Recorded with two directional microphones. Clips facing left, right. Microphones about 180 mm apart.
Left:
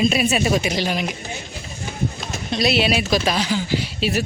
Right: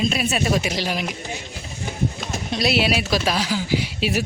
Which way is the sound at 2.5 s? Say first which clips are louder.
Left 2 dB; 5° right (ahead or behind).